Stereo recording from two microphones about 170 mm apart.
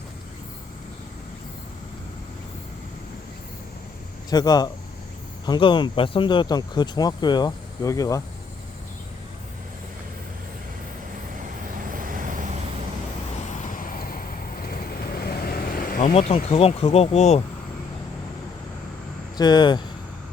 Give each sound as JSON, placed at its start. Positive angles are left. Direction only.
{"t": 4.3, "sound": "speech", "side_deg": 25}
{"t": 11.8, "sound": "vehicle", "side_deg": -55}
{"t": 13.6, "sound": "vehicle", "side_deg": 55}
{"t": 16.3, "sound": "speech", "side_deg": 35}
{"t": 19.4, "sound": "speech", "side_deg": 25}